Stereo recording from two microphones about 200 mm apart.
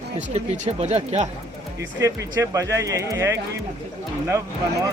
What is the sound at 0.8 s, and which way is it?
Speech, 35° right (ahead or behind).